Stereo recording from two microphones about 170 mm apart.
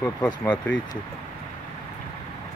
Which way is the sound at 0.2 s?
10° left (ahead or behind).